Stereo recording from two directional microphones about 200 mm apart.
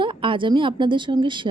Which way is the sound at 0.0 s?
25° right (ahead or behind).